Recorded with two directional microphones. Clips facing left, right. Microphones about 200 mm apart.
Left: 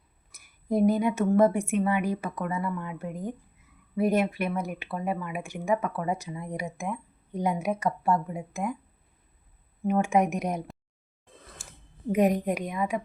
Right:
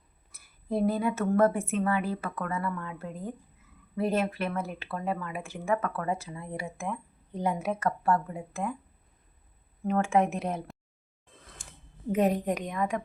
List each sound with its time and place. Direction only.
0.7 s speech: 15° left (ahead or behind)
9.8 s speech: 15° left (ahead or behind)
11.6 s a sound: 5° left (ahead or behind)
12.1 s speech: 10° left (ahead or behind)